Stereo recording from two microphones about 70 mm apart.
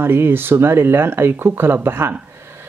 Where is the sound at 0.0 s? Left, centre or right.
Right.